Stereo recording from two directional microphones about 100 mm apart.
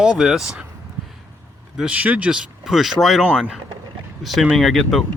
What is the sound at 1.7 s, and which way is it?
Speech, 10° right (ahead or behind).